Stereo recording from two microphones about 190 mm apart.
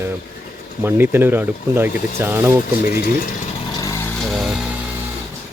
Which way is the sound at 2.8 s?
55° left (ahead or behind).